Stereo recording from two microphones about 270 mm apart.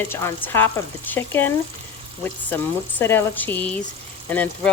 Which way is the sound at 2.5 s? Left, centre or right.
Centre.